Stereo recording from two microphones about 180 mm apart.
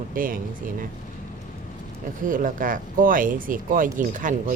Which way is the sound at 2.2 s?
50° right (ahead or behind).